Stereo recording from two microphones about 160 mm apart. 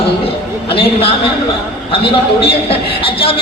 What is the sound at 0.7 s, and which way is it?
A man's voice, 35° left (ahead or behind).